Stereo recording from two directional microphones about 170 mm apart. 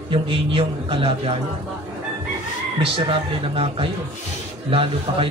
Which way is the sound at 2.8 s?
35° right (ahead or behind).